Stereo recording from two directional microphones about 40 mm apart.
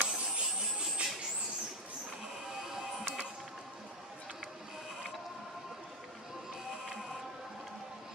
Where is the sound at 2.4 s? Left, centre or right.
Centre.